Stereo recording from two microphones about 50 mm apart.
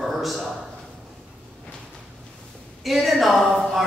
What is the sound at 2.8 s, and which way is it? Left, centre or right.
A man's voice, centre.